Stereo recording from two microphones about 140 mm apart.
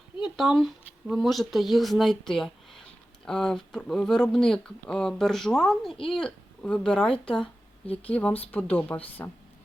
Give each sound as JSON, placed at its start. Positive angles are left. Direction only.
{"t": 0.2, "sound": "speech", "side_deg": 0}